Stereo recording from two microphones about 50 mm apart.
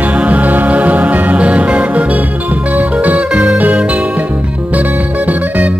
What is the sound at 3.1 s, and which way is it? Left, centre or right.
Music, right.